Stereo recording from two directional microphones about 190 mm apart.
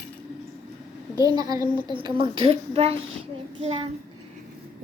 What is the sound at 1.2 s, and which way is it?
A woman's voice, 20° right (ahead or behind).